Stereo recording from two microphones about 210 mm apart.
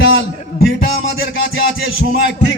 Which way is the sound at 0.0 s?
65° left (ahead or behind).